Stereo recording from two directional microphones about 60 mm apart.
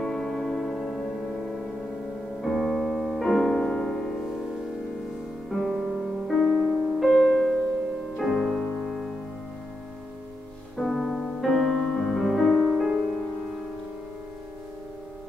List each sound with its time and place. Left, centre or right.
0.0 s music: centre
2.4 s piano: centre
3.3 s music: centre
5.5 s music: centre
10.8 s music: centre
12.7 s music: centre